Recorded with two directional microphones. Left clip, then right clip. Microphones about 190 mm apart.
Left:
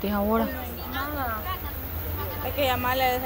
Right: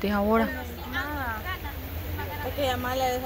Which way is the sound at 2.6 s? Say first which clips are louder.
Left 3 dB; 10° left (ahead or behind).